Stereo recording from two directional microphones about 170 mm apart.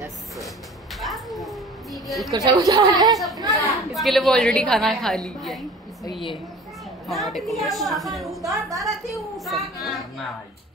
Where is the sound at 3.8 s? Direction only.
Centre (ahead or behind).